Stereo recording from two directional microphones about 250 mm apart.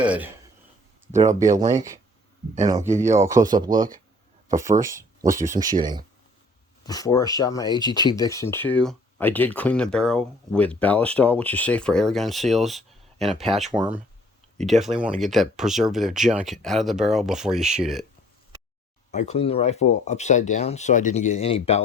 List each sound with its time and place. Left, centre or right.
0.0 s speech: centre
1.3 s speech: centre
3.0 s speech: centre
3.3 s speech: right
4.4 s speech: centre
6.8 s speech: centre
19.1 s speech: left